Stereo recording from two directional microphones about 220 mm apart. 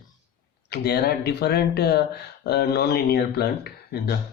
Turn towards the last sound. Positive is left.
turn(degrees=45)  # may be behind; listen again after turning